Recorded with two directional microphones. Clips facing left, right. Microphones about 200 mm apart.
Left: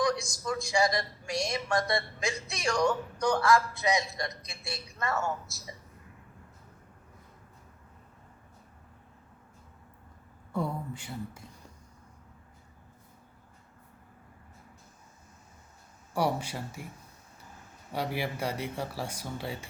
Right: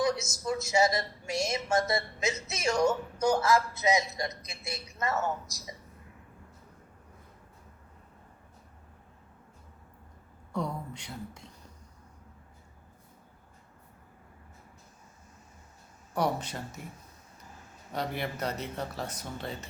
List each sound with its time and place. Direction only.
0.0 s a woman's voice: 25° right (ahead or behind)
10.5 s speech: 5° left (ahead or behind)
16.1 s speech: 10° left (ahead or behind)
17.9 s speech: 10° left (ahead or behind)